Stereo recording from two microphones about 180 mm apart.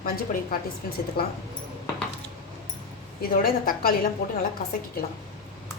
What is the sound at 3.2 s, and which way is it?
Speech, 55° left (ahead or behind).